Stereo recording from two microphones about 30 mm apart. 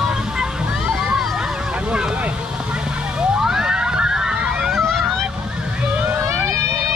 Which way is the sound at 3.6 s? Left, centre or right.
Right.